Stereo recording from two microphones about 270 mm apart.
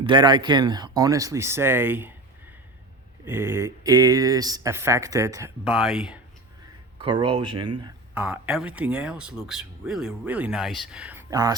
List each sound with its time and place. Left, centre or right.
0.0 s speech: centre
3.2 s speech: centre
7.0 s speech: centre
7.9 s speech: centre